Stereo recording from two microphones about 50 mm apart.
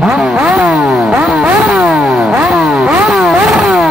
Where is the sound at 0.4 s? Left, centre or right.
Centre.